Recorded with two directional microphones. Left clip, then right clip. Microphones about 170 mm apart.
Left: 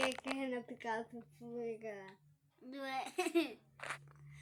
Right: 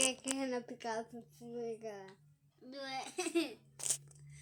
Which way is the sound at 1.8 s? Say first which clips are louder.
Right 1 dB; 10° left (ahead or behind).